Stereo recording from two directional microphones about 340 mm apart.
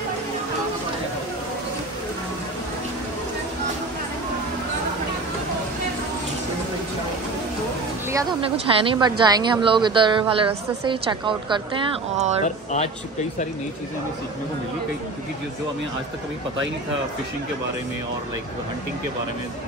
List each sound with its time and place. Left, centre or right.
8.1 s a woman's voice: centre
12.4 s speech: centre